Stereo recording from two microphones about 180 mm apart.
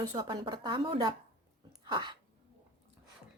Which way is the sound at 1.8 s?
25° right (ahead or behind).